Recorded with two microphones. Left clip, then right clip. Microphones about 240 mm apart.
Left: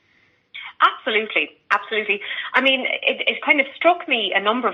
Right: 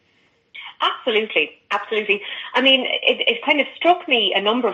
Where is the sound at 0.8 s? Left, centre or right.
Left.